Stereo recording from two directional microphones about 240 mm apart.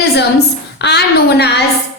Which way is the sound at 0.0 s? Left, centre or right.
Left.